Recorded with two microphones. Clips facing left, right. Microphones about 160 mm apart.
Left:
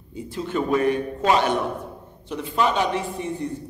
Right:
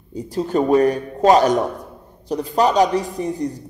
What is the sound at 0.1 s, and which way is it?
Speech, 40° right (ahead or behind).